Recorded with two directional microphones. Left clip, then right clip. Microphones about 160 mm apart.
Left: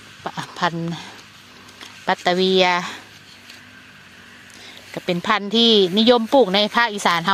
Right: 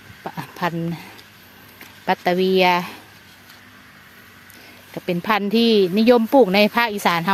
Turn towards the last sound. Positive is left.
turn(degrees=-20)  # may be behind; listen again after turning